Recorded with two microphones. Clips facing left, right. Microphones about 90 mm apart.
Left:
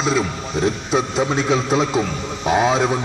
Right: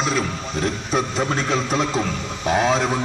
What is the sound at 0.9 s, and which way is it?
A man's voice, 5° left (ahead or behind).